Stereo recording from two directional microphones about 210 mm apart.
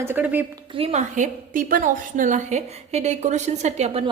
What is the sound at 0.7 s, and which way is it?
A woman's voice, 30° right (ahead or behind).